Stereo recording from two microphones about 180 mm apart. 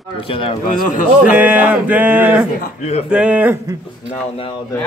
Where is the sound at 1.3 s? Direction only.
10° right (ahead or behind).